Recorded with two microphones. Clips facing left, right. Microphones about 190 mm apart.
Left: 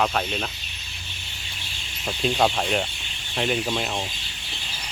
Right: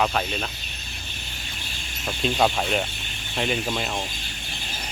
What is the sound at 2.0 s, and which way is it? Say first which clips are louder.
Speech: even; centre (ahead or behind).